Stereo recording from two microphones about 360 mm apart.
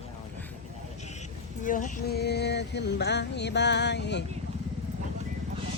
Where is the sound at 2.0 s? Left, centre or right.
Left.